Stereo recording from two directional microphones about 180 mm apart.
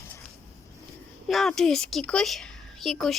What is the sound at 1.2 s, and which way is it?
A woman's voice, centre (ahead or behind).